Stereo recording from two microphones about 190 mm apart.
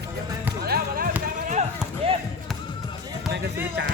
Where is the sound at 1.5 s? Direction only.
35° right (ahead or behind).